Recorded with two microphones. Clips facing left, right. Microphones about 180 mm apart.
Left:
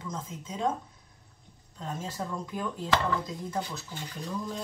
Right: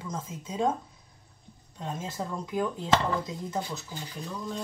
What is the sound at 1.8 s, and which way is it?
Speech, 10° right (ahead or behind).